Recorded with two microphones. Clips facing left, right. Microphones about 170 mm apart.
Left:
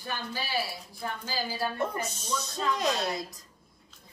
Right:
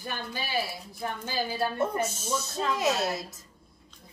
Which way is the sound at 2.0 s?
5° right (ahead or behind).